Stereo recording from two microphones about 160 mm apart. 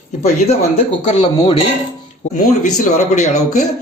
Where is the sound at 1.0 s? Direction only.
30° left (ahead or behind).